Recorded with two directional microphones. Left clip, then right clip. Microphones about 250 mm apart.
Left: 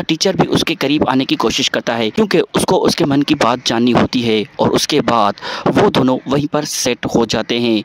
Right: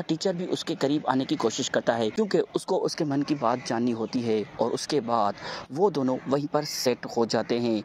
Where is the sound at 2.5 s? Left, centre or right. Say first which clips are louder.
Left 13 dB; left.